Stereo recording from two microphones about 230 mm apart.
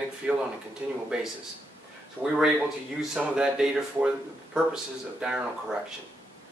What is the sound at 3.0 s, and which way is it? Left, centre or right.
Speech, centre.